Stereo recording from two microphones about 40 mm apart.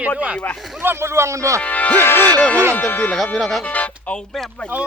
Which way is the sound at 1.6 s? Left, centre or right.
Left.